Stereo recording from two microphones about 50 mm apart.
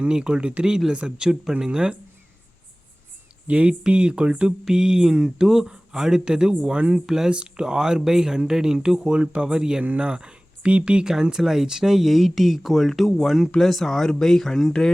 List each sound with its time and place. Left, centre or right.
0.1 s speech: centre
3.4 s speech: right
7.0 s speech: centre
7.3 s speech: centre
9.8 s speech: right
11.1 s speech: centre